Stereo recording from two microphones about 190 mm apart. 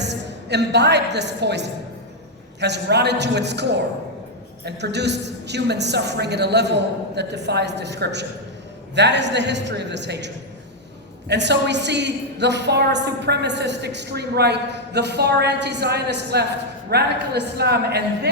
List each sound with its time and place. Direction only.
0.0 s a woman's voice: 65° right (ahead or behind)